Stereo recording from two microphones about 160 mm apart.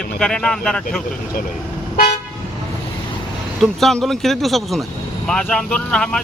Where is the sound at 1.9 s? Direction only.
55° left (ahead or behind).